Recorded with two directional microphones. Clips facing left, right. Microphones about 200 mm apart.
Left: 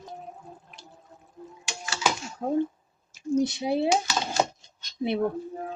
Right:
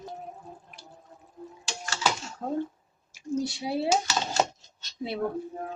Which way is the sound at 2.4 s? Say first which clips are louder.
Left 5 dB; 15° left (ahead or behind).